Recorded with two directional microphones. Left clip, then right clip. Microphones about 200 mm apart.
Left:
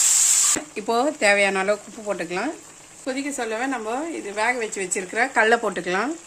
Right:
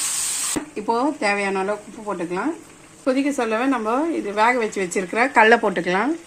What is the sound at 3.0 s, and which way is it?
A woman's voice, centre (ahead or behind).